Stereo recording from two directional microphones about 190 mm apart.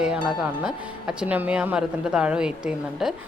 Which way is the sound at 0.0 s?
5° right (ahead or behind).